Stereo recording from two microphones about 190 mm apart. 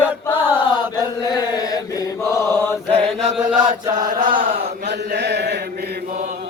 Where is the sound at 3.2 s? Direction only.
40° right (ahead or behind).